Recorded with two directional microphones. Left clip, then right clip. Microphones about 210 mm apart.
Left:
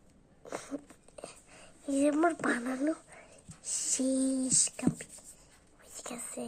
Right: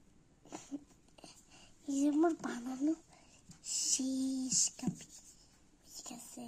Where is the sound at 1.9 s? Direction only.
10° left (ahead or behind).